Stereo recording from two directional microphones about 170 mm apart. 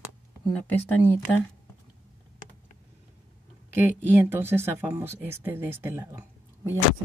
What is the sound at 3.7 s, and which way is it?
Speech, 10° right (ahead or behind).